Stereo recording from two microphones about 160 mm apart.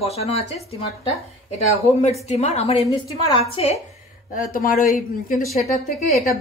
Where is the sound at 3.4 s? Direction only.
40° left (ahead or behind).